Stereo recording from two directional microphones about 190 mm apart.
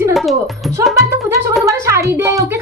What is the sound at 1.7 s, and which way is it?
Speech, 15° right (ahead or behind).